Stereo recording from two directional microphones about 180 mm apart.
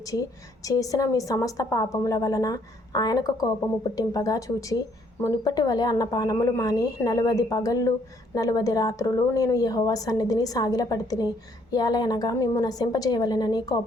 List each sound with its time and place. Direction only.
0.0 s a woman's voice: 20° left (ahead or behind)